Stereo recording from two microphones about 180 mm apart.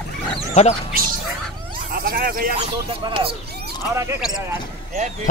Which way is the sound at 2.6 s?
30° right (ahead or behind).